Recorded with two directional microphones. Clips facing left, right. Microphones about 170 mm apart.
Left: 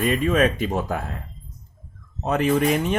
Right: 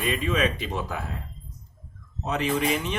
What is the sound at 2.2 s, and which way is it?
Speech, 50° left (ahead or behind).